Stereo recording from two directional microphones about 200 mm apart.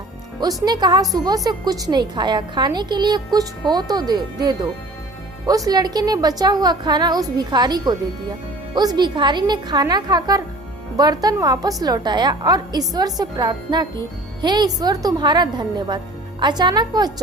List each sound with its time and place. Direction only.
0.3 s a woman's voice: 20° right (ahead or behind)